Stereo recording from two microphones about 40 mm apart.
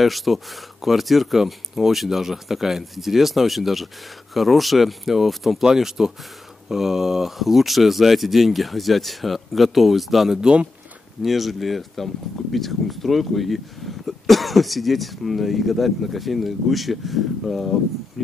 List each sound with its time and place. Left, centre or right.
0.0 s speech: centre
10.4 s speech: right
11.2 s speech: centre